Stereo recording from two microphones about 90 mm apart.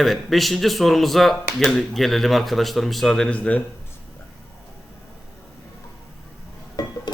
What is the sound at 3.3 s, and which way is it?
Speech, 15° left (ahead or behind).